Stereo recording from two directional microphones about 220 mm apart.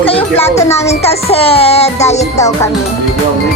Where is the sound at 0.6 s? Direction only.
15° left (ahead or behind).